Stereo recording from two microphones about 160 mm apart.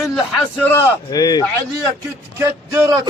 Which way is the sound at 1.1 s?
25° left (ahead or behind).